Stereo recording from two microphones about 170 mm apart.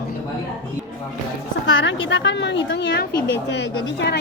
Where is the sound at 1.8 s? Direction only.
90° left.